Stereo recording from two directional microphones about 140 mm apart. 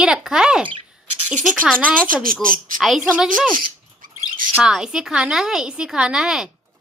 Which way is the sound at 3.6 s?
85° right.